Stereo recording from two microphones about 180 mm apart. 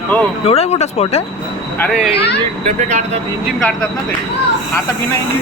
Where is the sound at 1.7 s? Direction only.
10° left (ahead or behind).